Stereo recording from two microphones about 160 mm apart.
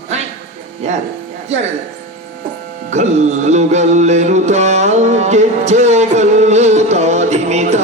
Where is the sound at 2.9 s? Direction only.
45° right (ahead or behind).